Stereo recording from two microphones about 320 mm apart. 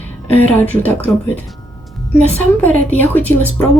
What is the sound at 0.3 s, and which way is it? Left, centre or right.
Speech, centre.